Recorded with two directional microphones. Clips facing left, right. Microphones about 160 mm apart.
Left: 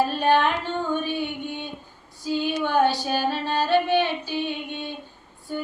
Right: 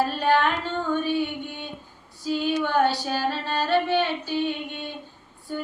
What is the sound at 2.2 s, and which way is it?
Child singing, 15° left (ahead or behind).